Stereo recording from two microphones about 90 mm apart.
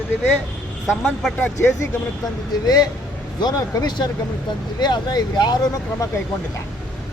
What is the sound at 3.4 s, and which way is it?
Speech, 55° left (ahead or behind).